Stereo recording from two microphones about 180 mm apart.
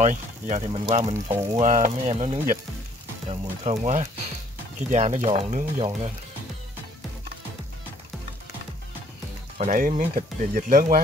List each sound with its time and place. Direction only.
0.0 s speech: 40° right (ahead or behind)
0.7 s speech: 30° right (ahead or behind)
9.6 s speech: 45° right (ahead or behind)